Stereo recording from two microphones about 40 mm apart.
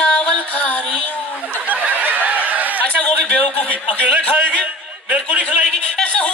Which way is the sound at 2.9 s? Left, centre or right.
Left.